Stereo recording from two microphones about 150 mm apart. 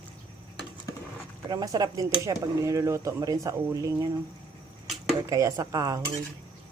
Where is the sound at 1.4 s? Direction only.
25° right (ahead or behind).